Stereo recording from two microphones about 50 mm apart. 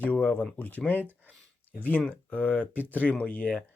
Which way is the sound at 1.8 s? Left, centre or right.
Left.